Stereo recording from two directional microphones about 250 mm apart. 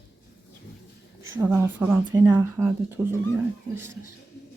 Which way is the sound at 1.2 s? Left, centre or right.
Centre.